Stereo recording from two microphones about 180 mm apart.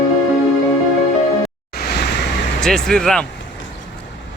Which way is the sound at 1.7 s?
60° left (ahead or behind).